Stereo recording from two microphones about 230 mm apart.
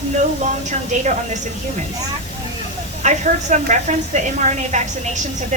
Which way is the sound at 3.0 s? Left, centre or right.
Right.